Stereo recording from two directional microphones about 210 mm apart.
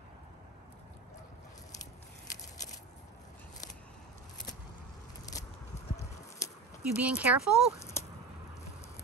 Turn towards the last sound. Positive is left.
turn(degrees=-5)  # may be behind; listen again after turning